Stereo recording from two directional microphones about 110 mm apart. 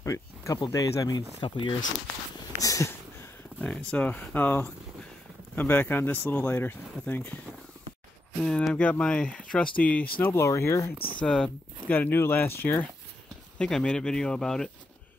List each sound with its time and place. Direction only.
0.0 s a sound: 30° left (ahead or behind)
0.7 s speech: 30° left (ahead or behind)
1.4 s speech: 45° left (ahead or behind)
2.3 s a sound: 30° left (ahead or behind)
3.6 s speech: 10° left (ahead or behind)
8.4 s speech: 5° left (ahead or behind); by 11.0 s 25° left (ahead or behind)
11.1 s speech: 10° left (ahead or behind)
13.6 s speech: 5° left (ahead or behind)